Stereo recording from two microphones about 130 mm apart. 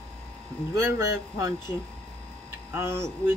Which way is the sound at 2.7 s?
20° right (ahead or behind).